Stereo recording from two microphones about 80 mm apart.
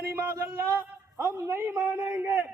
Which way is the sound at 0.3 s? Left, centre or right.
Right.